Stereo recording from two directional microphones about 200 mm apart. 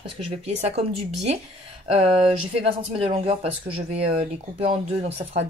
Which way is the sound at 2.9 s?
30° right (ahead or behind).